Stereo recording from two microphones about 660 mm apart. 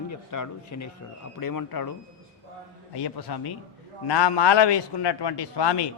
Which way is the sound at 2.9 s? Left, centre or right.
Left.